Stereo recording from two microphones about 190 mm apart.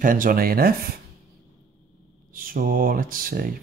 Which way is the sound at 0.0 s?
45° right (ahead or behind).